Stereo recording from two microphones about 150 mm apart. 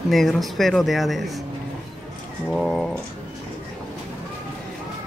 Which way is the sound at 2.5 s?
5° left (ahead or behind).